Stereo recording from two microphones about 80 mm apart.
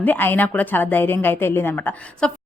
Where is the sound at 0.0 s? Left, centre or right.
Left.